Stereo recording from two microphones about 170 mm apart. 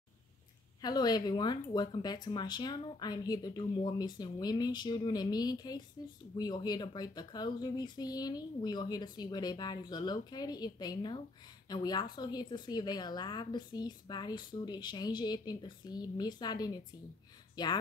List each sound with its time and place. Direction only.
0.7 s speech: 25° left (ahead or behind)